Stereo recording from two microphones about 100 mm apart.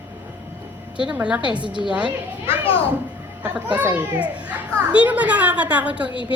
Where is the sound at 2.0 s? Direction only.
65° left (ahead or behind).